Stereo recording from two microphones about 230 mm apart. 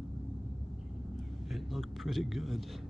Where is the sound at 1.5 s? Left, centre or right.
Centre.